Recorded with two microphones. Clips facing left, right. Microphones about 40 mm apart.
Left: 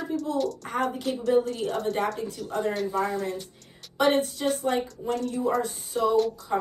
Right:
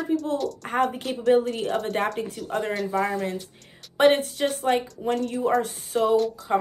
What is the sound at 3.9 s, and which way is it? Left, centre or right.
Speech, right.